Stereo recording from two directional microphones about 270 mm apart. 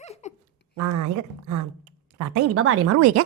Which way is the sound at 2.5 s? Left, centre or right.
Right.